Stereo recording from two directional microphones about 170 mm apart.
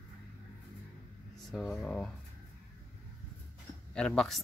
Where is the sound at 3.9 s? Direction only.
5° left (ahead or behind).